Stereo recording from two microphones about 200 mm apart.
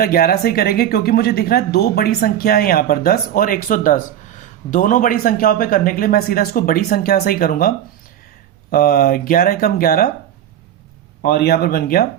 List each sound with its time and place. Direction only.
0.0 s speech: 50° left (ahead or behind)
8.7 s speech: 45° left (ahead or behind)
11.2 s speech: 50° left (ahead or behind)